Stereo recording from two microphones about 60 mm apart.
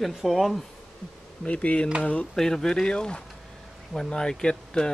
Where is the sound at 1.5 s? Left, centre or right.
Left.